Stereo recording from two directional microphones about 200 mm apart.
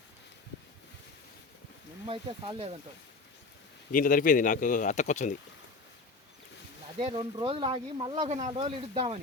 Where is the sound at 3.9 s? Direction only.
45° left (ahead or behind).